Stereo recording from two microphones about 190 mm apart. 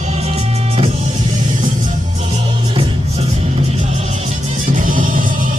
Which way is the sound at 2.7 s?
30° right (ahead or behind).